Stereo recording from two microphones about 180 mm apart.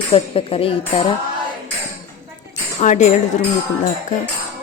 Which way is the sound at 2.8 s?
40° left (ahead or behind).